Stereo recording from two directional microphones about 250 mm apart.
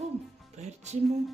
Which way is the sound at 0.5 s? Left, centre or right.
Right.